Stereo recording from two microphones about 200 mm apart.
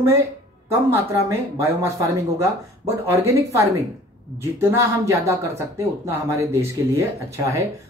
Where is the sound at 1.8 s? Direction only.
15° right (ahead or behind).